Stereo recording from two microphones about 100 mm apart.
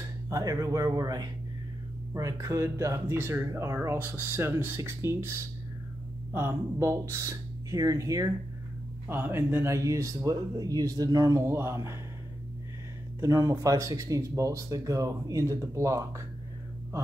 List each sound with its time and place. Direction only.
0.3 s speech: 35° right (ahead or behind)
6.3 s speech: 30° right (ahead or behind)
9.0 s speech: 20° right (ahead or behind)
13.2 s speech: 35° right (ahead or behind)